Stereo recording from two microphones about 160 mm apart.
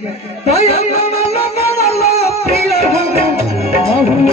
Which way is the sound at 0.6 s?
40° left (ahead or behind).